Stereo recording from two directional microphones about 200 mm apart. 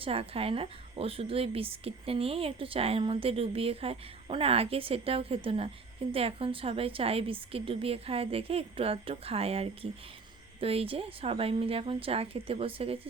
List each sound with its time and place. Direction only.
0.0 s a woman's voice: 30° right (ahead or behind)